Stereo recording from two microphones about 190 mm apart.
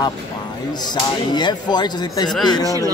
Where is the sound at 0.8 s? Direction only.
20° left (ahead or behind).